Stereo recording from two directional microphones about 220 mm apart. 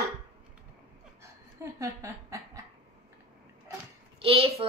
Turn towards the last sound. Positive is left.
turn(degrees=-25)  # may be behind; listen again after turning